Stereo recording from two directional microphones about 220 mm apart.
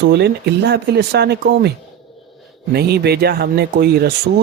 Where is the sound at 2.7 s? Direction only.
45° right (ahead or behind).